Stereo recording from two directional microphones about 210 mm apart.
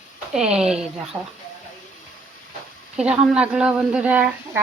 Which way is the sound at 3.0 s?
5° right (ahead or behind).